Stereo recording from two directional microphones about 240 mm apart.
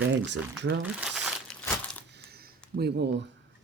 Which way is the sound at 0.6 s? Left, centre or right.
Right.